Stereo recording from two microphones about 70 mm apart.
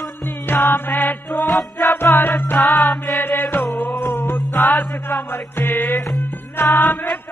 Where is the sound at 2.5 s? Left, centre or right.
Centre.